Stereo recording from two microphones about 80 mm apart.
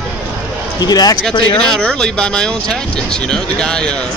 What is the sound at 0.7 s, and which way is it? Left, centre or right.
Speech, left.